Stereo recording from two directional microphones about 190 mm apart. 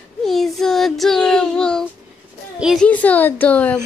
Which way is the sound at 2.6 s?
Centre (ahead or behind).